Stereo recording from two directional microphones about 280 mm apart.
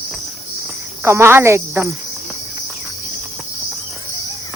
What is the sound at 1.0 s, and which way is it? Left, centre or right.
Cricket, centre.